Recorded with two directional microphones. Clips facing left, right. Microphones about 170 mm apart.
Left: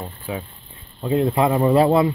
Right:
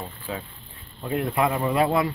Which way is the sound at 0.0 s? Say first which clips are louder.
Left 4 dB; 20° left (ahead or behind).